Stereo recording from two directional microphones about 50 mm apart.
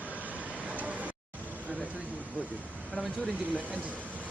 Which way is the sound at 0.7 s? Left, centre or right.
Right.